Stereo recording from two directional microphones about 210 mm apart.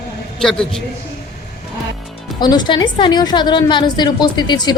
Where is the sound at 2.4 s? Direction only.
20° left (ahead or behind).